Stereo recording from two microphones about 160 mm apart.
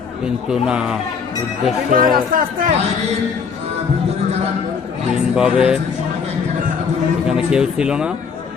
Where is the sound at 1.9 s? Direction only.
60° right (ahead or behind).